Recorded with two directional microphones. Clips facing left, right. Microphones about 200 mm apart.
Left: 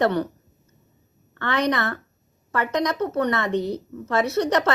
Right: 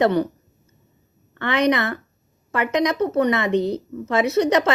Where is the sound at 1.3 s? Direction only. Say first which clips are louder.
Right 4 dB; 15° right (ahead or behind).